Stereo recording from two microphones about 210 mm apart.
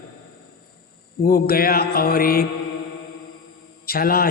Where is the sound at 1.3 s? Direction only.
45° left (ahead or behind).